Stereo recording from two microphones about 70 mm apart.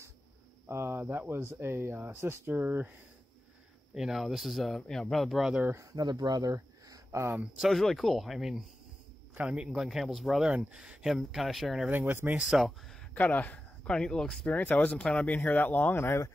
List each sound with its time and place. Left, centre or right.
0.7 s speech: right
3.9 s speech: centre
5.9 s speech: right
7.5 s speech: centre
9.3 s a man's voice: centre
9.8 s speech: centre
10.4 s speech: centre
11.1 s speech: centre
11.9 s speech: right
12.4 s speech: centre
13.1 s speech: left
13.8 s speech: centre
14.5 s speech: left